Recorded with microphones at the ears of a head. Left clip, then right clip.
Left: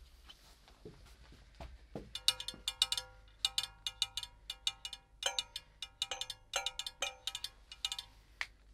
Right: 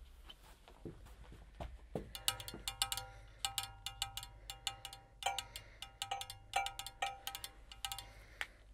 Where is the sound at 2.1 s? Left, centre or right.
Left.